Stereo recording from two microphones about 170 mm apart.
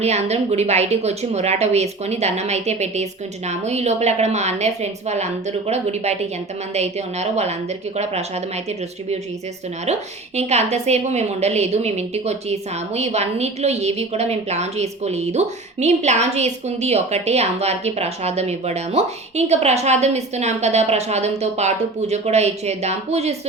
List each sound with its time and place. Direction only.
0.0 s a woman's voice: 40° right (ahead or behind)
9.8 s a woman's voice: 40° right (ahead or behind)